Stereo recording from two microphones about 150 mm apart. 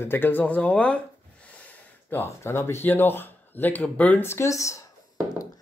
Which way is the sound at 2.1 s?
15° left (ahead or behind).